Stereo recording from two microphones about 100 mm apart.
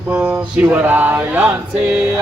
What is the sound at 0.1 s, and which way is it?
Male singing, 10° right (ahead or behind).